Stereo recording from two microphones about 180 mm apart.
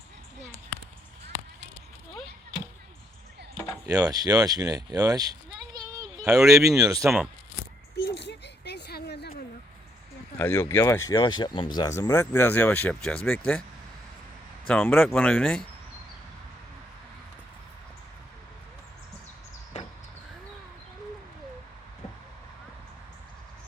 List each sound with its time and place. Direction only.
3.8 s speech: 20° right (ahead or behind)
6.2 s speech: 5° right (ahead or behind)
6.7 s speech: 20° right (ahead or behind)
7.9 s a sound: 65° left (ahead or behind)
10.3 s speech: 10° left (ahead or behind)
14.7 s speech: 10° left (ahead or behind)